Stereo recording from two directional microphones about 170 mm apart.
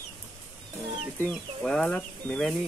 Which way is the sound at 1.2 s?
5° left (ahead or behind).